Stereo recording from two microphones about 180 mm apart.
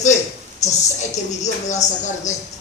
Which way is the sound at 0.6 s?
40° left (ahead or behind).